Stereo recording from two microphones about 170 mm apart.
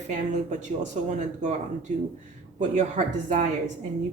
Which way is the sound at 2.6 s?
45° right (ahead or behind).